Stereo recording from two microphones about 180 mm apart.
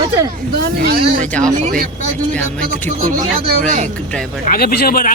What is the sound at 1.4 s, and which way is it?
Speech, 45° right (ahead or behind).